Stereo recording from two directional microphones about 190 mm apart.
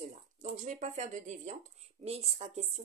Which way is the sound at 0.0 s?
40° right (ahead or behind).